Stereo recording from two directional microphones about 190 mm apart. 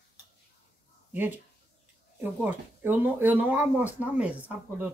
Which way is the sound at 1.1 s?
10° right (ahead or behind).